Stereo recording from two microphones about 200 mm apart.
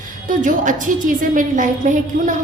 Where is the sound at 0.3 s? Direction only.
40° right (ahead or behind).